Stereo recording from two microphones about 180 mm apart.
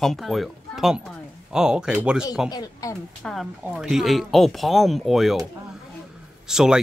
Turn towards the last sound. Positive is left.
turn(degrees=-5)  # may be behind; listen again after turning